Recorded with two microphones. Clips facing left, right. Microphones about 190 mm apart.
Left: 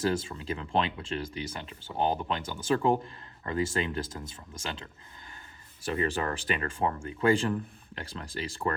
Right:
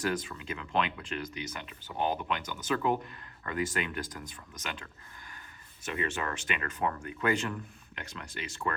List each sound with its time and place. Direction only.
0.0 s speech: 25° left (ahead or behind)